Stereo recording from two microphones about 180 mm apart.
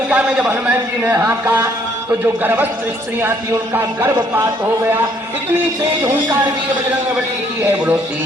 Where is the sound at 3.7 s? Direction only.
10° right (ahead or behind).